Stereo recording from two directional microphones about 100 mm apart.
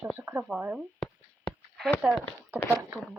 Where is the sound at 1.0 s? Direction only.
Centre (ahead or behind).